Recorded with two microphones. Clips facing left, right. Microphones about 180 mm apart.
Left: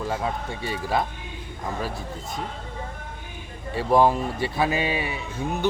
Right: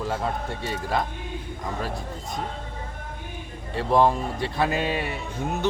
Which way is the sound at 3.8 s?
5° left (ahead or behind).